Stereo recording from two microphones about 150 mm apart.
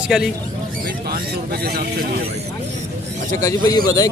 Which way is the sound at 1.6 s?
90° right.